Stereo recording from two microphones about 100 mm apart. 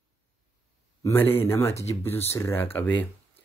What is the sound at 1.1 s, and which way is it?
Speech, 20° left (ahead or behind).